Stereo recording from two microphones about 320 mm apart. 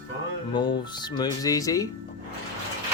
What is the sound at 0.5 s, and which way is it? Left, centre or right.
Speech, centre.